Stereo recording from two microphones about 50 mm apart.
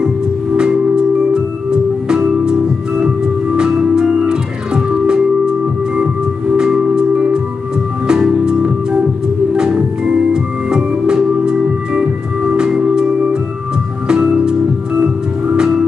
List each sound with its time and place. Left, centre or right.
0.6 s music: centre
3.5 s organ: centre
6.5 s music: centre
9.8 s organ: centre
14.0 s music: centre
15.5 s music: centre